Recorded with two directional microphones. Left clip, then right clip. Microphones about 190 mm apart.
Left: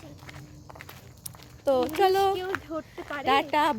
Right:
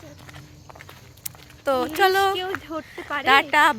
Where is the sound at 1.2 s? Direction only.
10° left (ahead or behind).